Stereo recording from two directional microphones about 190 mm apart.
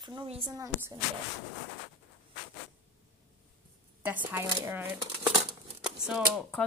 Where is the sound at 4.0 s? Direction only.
10° right (ahead or behind).